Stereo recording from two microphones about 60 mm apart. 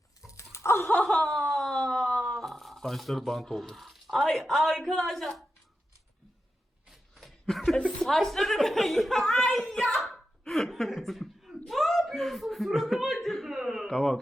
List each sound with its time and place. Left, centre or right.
0.3 s dog: left
1.0 s chuckle: centre
1.4 s a sound: centre
6.9 s chuckle: centre
8.0 s a woman's voice: centre
10.4 s chuckle: centre
13.8 s speech: centre